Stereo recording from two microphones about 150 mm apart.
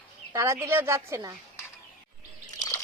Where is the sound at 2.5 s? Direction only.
25° left (ahead or behind).